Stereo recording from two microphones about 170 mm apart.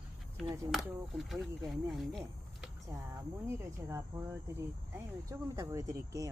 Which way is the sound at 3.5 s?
15° right (ahead or behind).